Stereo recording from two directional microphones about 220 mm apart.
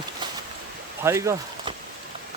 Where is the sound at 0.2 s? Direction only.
20° right (ahead or behind).